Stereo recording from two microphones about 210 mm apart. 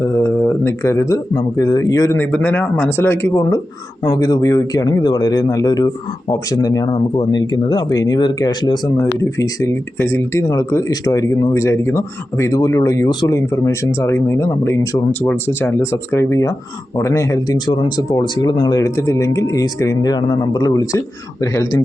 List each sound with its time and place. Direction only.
0.0 s speech: 15° left (ahead or behind)